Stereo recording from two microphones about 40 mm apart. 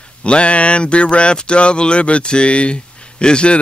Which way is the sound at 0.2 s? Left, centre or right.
Left.